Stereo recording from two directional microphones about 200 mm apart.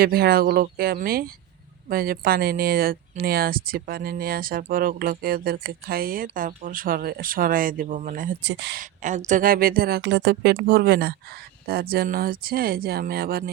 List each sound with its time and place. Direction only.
0.0 s speech: 50° right (ahead or behind)
8.4 s speech: 60° right (ahead or behind)
8.8 s speech: 40° right (ahead or behind)